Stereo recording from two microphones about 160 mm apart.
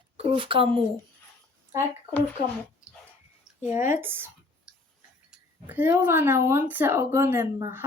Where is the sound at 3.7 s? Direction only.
15° right (ahead or behind).